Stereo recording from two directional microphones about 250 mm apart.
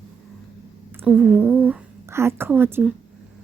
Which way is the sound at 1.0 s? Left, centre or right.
Centre.